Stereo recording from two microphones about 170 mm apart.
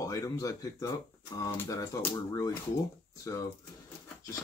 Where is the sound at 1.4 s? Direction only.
15° left (ahead or behind).